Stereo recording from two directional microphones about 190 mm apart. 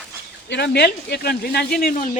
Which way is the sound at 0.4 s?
60° left (ahead or behind).